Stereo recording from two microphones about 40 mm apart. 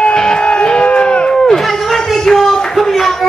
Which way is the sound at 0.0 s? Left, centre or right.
Centre.